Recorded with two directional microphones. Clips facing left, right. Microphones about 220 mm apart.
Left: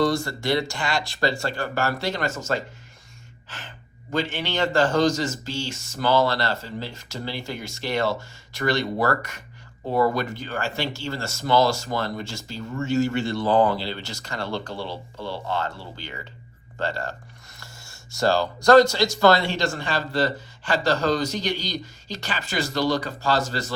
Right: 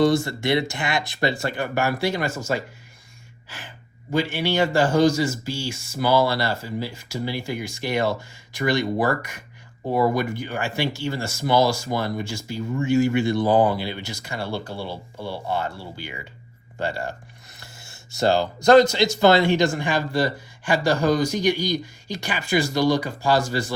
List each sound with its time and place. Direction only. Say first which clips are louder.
0.0 s speech: right 3 dB; 20° right (ahead or behind)
18.2 s speech: right 1 dB; 20° right (ahead or behind)